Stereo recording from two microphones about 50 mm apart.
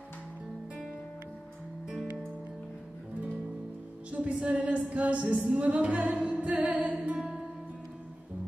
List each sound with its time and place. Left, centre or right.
4.1 s a woman's voice: right
5.6 s music: right
7.2 s music: centre